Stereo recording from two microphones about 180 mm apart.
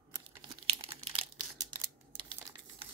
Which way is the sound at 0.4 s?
30° right (ahead or behind).